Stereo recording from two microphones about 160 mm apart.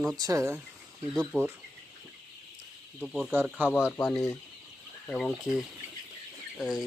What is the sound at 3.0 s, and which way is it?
Speech, centre (ahead or behind).